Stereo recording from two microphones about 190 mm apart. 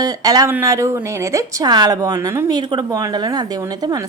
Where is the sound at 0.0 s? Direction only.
20° right (ahead or behind).